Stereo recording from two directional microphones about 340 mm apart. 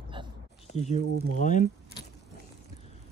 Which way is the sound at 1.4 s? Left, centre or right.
Left.